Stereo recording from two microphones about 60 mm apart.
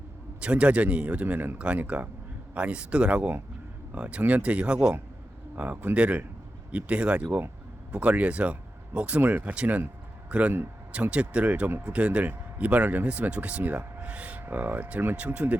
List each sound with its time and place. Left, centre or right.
0.3 s a man's voice: centre